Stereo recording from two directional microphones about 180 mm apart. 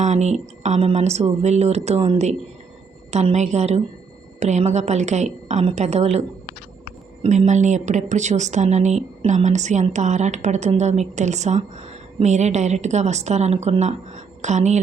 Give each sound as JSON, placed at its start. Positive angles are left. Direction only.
{"t": 0.0, "sound": "a woman's voice", "side_deg": -40}